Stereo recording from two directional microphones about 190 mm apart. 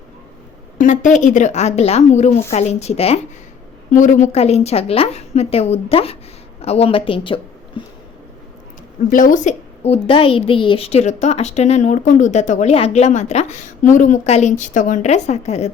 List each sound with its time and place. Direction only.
0.8 s a woman's voice: 40° left (ahead or behind); by 7.9 s 25° left (ahead or behind)
9.0 s a woman's voice: 45° left (ahead or behind)